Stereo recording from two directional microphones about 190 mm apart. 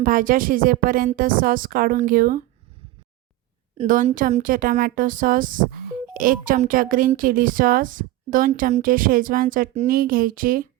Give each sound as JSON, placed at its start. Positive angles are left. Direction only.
{"t": 0.0, "sound": "speech", "side_deg": -45}
{"t": 3.8, "sound": "speech", "side_deg": -40}